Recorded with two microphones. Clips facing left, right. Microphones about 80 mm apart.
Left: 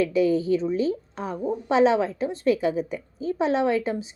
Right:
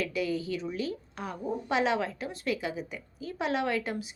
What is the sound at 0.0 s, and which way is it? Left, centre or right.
A woman's voice, left.